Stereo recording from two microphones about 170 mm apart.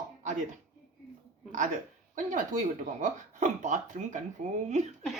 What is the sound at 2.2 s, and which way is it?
Speech, 50° right (ahead or behind).